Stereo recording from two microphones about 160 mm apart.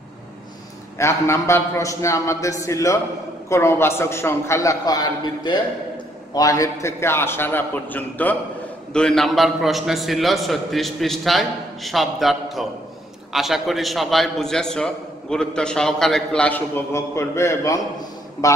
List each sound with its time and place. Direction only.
0.9 s a man's voice: 15° left (ahead or behind)